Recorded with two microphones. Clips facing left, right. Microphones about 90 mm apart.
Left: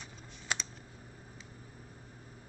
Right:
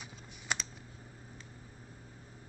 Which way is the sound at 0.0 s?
Centre (ahead or behind).